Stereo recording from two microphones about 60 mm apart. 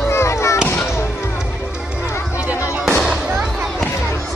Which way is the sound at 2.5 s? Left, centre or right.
Right.